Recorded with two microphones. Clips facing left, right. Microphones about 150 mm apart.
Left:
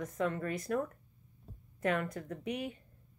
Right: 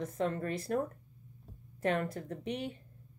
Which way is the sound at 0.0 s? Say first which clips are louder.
Right 1 dB; 30° right (ahead or behind).